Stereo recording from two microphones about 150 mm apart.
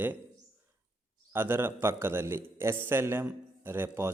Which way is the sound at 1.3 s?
15° right (ahead or behind).